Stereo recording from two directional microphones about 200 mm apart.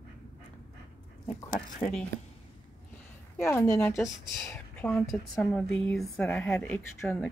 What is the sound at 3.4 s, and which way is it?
A woman's voice, 15° left (ahead or behind).